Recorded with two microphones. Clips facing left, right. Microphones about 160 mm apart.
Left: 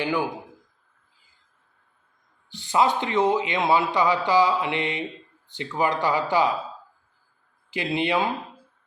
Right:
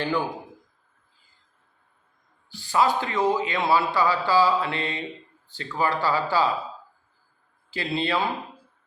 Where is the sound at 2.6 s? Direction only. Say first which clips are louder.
Left 1 dB; 20° left (ahead or behind).